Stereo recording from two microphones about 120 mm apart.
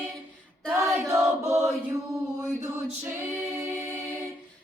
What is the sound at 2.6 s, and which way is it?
A capella, 25° right (ahead or behind).